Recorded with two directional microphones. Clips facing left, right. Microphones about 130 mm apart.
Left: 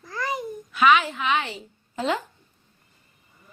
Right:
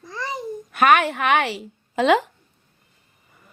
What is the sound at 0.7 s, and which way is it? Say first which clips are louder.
A woman's voice: right 2 dB; 55° right (ahead or behind).